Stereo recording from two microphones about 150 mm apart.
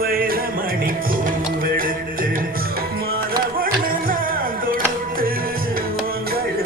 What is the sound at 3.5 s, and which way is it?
Music, 75° right (ahead or behind).